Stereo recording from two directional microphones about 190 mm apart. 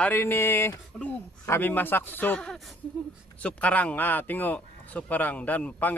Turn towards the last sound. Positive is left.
turn(degrees=10)  # may be behind; listen again after turning